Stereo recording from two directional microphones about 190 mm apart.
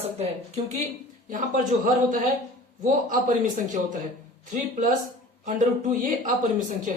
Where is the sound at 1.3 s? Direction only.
45° right (ahead or behind).